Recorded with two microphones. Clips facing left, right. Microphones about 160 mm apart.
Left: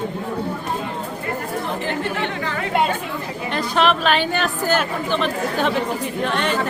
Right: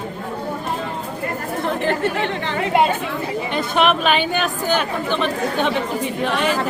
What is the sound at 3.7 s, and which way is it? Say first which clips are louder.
Speech: right 1 dB; 10° right (ahead or behind).